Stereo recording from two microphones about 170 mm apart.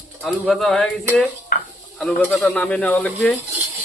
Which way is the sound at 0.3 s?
Centre (ahead or behind).